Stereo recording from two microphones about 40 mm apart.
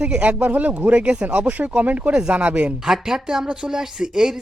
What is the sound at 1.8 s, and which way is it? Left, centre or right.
Speech, right.